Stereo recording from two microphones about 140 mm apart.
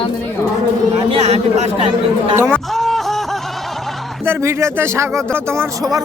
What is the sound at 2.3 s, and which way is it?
Speech, 15° right (ahead or behind).